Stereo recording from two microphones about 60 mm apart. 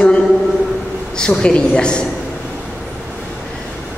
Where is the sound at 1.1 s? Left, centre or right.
Centre.